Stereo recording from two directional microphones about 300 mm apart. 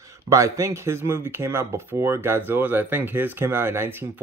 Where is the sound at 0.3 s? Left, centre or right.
Centre.